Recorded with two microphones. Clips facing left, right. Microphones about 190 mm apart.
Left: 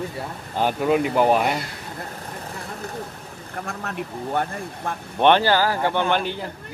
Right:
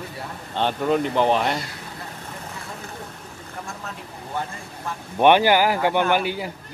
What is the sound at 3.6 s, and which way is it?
Speech, 65° left (ahead or behind).